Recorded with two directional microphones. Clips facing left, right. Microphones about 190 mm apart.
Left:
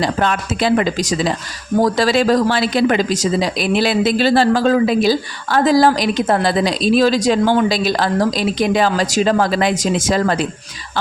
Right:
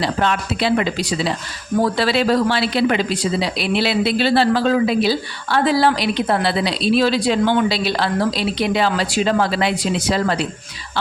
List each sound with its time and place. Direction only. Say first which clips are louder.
0.0 s speech: left 2 dB; 45° left (ahead or behind)